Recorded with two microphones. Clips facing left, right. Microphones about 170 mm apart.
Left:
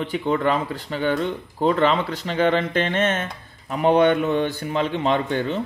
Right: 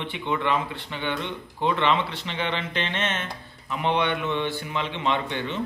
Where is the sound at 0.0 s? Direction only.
40° left (ahead or behind).